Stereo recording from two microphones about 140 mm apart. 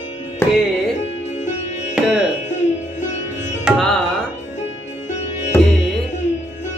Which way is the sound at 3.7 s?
5° left (ahead or behind).